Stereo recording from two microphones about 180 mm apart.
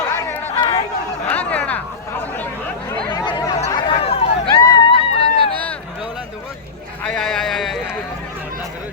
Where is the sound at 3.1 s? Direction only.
25° left (ahead or behind).